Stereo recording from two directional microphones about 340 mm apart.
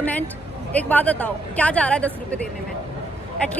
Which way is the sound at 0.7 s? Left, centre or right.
Centre.